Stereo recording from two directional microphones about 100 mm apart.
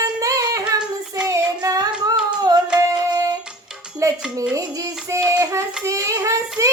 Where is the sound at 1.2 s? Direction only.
35° right (ahead or behind).